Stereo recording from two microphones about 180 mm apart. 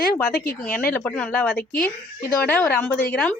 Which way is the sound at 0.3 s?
60° left (ahead or behind).